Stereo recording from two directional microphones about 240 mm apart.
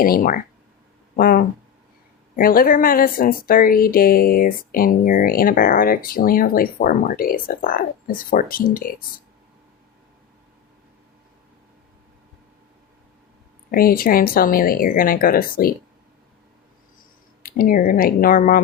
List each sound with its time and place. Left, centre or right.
0.0 s speech: left
13.7 s speech: left
17.4 s speech: left